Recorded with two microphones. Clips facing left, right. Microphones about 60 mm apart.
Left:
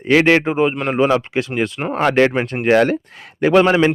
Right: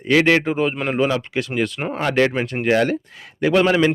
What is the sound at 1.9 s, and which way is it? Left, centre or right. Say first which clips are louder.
Speech: left 4 dB; left.